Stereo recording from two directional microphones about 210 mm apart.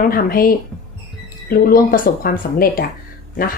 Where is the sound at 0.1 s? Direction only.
45° left (ahead or behind).